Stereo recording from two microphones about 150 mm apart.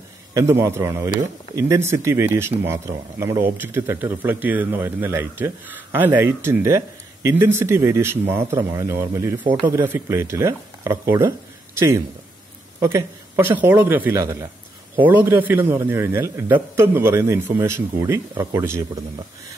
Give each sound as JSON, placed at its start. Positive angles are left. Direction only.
{"t": 0.3, "sound": "speech", "side_deg": -20}